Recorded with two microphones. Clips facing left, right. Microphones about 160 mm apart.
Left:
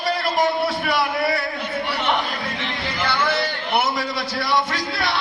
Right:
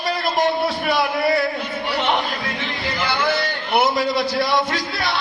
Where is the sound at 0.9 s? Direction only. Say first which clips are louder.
Right 4 dB; 25° right (ahead or behind).